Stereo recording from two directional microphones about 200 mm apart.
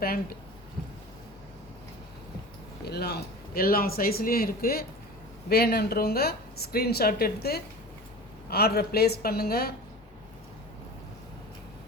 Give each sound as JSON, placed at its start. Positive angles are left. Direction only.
{"t": 0.0, "sound": "speech", "side_deg": 50}
{"t": 2.8, "sound": "speech", "side_deg": 55}